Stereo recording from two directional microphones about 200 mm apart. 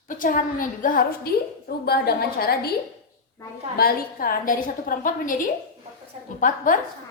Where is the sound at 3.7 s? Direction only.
50° left (ahead or behind).